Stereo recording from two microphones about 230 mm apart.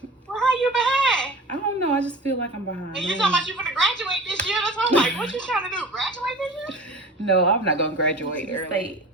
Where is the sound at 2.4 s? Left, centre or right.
Left.